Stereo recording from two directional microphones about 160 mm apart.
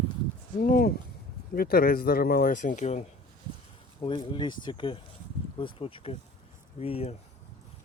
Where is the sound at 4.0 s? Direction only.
30° left (ahead or behind).